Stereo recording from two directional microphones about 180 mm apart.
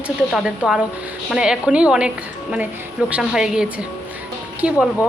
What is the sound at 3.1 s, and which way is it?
Speech, 5° right (ahead or behind).